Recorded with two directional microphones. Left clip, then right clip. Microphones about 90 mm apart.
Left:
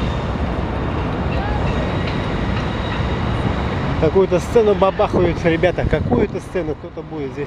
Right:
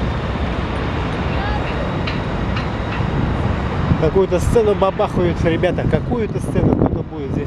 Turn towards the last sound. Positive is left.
turn(degrees=10)  # may be behind; listen again after turning